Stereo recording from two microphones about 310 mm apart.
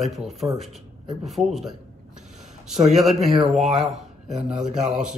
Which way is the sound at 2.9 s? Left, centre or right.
Centre.